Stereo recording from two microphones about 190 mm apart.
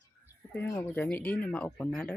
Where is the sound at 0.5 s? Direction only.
10° left (ahead or behind).